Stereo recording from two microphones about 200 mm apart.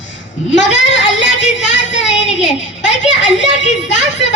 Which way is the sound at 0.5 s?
65° left (ahead or behind).